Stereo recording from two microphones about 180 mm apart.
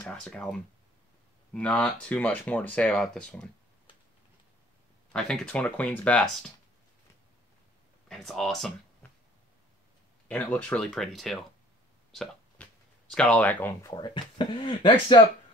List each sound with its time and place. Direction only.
0.0 s speech: 5° left (ahead or behind)
5.1 s speech: 5° left (ahead or behind)
8.1 s speech: centre (ahead or behind)
10.2 s speech: 5° left (ahead or behind)
12.1 s a sound: centre (ahead or behind)
13.1 s speech: 5° left (ahead or behind)
13.9 s speech: 25° left (ahead or behind)